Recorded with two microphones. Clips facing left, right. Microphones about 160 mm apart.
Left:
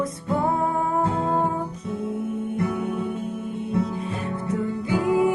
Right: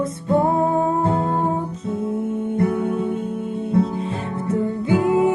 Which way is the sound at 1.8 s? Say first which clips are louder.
Right 5 dB; 25° right (ahead or behind).